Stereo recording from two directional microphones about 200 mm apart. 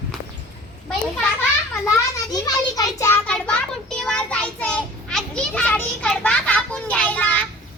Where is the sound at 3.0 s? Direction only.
10° left (ahead or behind).